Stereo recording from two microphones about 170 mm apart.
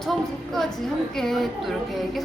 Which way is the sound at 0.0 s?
Centre (ahead or behind).